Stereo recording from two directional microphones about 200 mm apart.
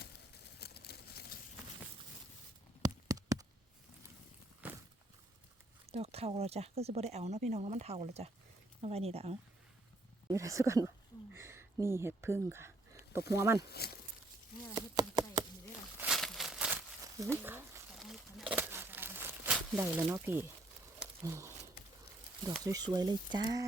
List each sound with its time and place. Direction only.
0.6 s a sound: 55° left (ahead or behind)
2.8 s a sound: 20° right (ahead or behind)
4.6 s walk: 5° right (ahead or behind)
5.8 s speech: 30° right (ahead or behind)
10.2 s a sound: 15° right (ahead or behind)
13.4 s speech: 15° right (ahead or behind)
13.7 s speech: 50° left (ahead or behind)
14.8 s chopping: 20° right (ahead or behind)
16.0 s crumpling: centre (ahead or behind)
17.2 s speech: 10° right (ahead or behind)
17.9 s crumpling: centre (ahead or behind)
21.2 s speech: 15° right (ahead or behind)